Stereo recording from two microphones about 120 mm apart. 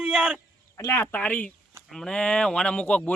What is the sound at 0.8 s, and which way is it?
Speech, 25° left (ahead or behind).